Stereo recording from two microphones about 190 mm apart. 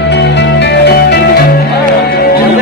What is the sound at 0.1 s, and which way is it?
Music, 65° left (ahead or behind).